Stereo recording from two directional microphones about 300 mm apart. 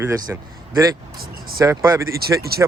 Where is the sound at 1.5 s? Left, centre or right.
Centre.